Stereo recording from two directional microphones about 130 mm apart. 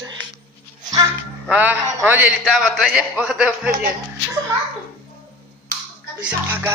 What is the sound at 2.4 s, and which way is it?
Speech, 5° left (ahead or behind).